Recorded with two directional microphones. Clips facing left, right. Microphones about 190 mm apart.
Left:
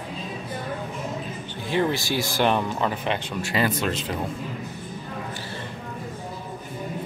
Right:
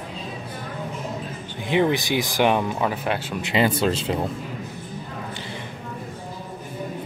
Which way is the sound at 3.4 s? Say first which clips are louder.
Right 4 dB; 25° right (ahead or behind).